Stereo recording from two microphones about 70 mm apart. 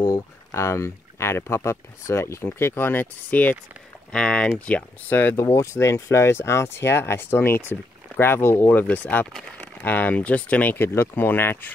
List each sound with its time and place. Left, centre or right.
0.1 s speech: left
5.5 s speech: left
8.8 s speech: left